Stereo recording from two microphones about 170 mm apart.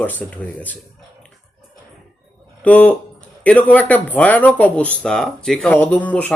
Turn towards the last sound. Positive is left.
turn(degrees=10)  # may be behind; listen again after turning